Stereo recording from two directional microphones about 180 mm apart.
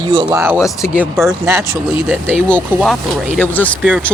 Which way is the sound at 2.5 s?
5° left (ahead or behind).